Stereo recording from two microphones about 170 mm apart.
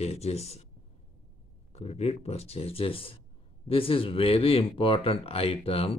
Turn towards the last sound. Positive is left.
turn(degrees=35)  # may be behind; listen again after turning